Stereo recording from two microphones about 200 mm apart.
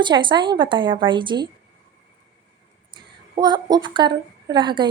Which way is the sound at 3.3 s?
20° right (ahead or behind).